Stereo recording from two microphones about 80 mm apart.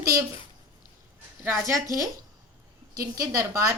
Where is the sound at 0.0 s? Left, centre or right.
Right.